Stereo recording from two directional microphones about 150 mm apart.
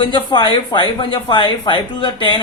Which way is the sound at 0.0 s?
30° left (ahead or behind).